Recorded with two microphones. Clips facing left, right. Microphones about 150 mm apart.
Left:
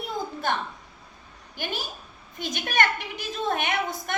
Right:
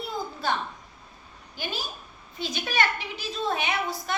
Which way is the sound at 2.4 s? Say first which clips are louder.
Left 1 dB; 50° left (ahead or behind).